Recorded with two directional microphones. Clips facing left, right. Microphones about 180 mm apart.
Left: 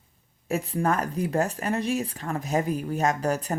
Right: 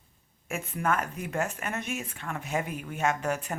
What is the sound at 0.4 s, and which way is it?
Speech, 35° left (ahead or behind).